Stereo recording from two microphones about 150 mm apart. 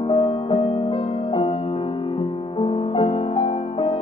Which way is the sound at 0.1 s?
40° left (ahead or behind).